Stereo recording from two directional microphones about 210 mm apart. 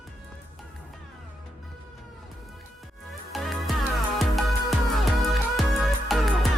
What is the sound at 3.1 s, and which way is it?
Music, centre (ahead or behind).